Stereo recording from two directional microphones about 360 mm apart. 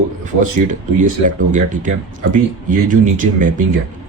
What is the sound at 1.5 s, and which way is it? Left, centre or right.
Speech, right.